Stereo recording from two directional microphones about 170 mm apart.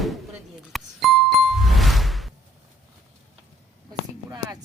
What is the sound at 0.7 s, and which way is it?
Music, centre (ahead or behind).